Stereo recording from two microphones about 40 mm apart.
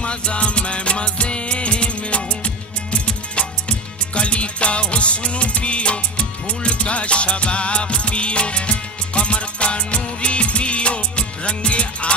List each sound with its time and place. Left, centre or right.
0.0 s music: left